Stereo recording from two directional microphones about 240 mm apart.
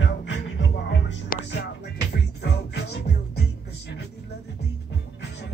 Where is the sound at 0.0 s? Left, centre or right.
Left.